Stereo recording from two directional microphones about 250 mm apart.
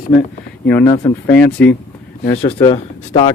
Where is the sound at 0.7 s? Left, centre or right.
Centre.